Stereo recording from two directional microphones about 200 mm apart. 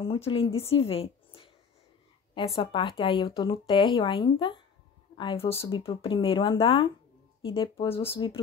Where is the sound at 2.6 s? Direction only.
25° left (ahead or behind).